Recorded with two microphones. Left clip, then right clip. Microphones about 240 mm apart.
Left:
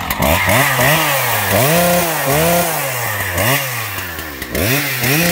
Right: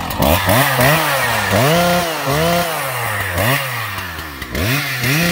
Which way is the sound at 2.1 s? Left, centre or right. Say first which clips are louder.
Left 2 dB; centre.